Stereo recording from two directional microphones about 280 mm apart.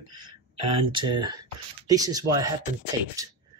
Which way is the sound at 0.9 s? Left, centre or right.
Centre.